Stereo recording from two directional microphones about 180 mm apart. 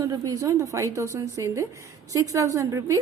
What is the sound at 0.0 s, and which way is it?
A woman's voice, 20° right (ahead or behind).